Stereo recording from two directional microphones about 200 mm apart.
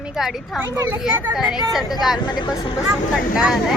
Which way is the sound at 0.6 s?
10° right (ahead or behind).